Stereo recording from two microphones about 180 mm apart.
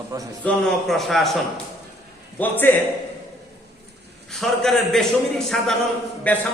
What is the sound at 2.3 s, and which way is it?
Speech, 10° left (ahead or behind).